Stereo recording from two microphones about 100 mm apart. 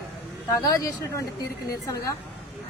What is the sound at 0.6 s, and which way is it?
Speech, 40° left (ahead or behind).